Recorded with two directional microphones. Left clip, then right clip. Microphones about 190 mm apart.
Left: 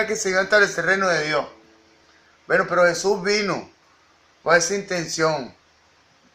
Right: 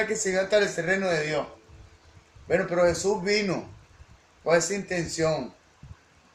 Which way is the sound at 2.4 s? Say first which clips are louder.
Left 5 dB; 40° left (ahead or behind).